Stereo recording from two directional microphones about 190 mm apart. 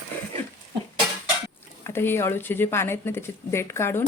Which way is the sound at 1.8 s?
10° left (ahead or behind).